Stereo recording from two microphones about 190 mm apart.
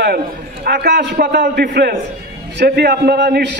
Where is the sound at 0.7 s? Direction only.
60° right (ahead or behind).